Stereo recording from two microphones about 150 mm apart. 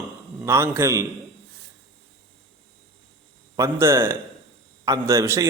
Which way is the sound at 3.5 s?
20° right (ahead or behind).